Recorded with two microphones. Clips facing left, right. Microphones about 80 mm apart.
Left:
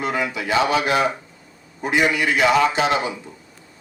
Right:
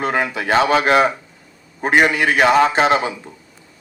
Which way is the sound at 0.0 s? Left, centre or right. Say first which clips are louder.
Right 3 dB; right.